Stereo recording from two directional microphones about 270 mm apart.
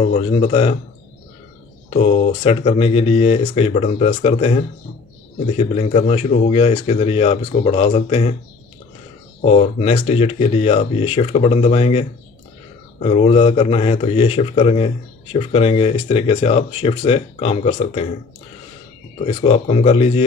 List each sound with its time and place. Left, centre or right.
0.0 s speech: left
1.9 s speech: left
5.8 s speech: left
9.4 s speech: left
19.2 s speech: left